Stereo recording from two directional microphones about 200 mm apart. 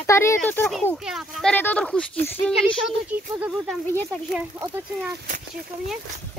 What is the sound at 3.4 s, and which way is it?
Speech, centre (ahead or behind).